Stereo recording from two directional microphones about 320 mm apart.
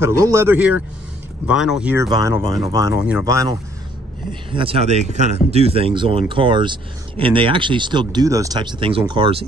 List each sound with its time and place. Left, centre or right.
0.0 s speech: centre